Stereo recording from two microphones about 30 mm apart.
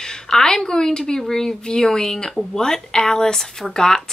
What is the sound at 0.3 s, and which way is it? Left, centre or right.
Speech, left.